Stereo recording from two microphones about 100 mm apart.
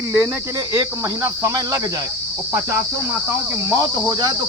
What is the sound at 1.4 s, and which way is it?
Speech, 40° right (ahead or behind).